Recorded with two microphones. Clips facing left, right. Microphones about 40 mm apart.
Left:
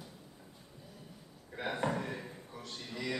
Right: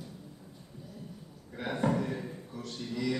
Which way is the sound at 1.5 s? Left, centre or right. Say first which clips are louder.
Right 4 dB; centre.